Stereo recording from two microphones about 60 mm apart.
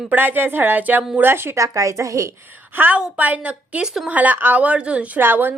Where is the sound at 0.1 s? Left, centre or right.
Right.